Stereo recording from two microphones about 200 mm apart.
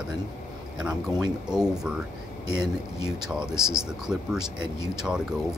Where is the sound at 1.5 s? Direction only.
5° right (ahead or behind).